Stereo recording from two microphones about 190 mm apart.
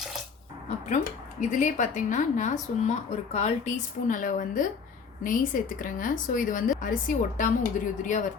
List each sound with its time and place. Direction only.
1.4 s a woman's voice: 40° left (ahead or behind)